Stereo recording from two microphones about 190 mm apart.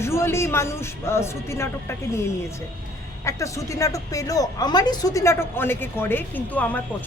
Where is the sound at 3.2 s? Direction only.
15° left (ahead or behind).